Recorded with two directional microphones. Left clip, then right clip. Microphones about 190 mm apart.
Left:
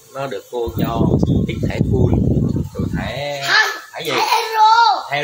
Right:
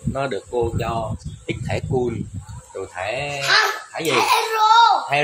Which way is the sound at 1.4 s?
20° right (ahead or behind).